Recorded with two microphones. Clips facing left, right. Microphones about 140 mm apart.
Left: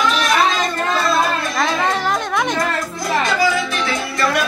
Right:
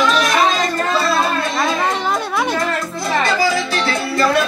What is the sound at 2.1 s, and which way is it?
Music, 5° right (ahead or behind).